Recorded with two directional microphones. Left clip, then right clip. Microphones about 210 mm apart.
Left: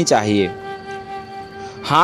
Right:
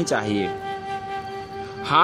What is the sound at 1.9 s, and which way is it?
Speech, 25° left (ahead or behind).